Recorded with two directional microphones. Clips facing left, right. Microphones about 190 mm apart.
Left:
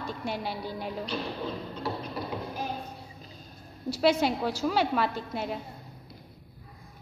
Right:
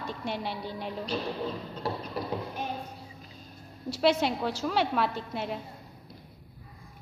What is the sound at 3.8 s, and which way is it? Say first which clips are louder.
A woman's voice: left 1 dB; centre (ahead or behind).